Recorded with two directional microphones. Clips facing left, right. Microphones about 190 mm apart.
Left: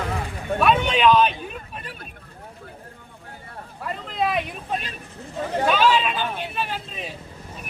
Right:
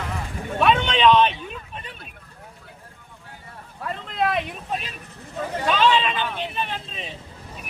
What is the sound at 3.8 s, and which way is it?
Vehicle, 5° left (ahead or behind).